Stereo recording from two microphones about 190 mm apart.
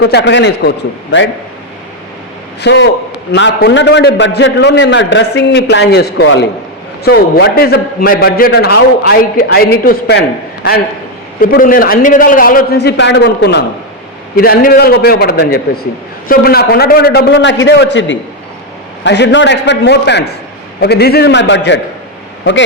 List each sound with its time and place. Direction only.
0.0 s a man's voice: 70° left (ahead or behind)
2.6 s a man's voice: 65° left (ahead or behind)
7.0 s a man's voice: 55° left (ahead or behind)
11.3 s a man's voice: 45° left (ahead or behind); by 13.7 s 65° left (ahead or behind)
14.3 s a man's voice: 50° left (ahead or behind); by 21.8 s 65° left (ahead or behind)